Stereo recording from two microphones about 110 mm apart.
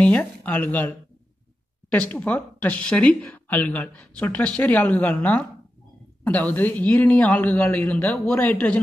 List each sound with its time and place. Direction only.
0.0 s speech: 15° left (ahead or behind)
1.9 s speech: 10° left (ahead or behind)